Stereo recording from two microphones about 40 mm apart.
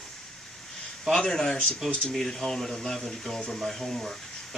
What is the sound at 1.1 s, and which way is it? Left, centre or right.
Speech, centre.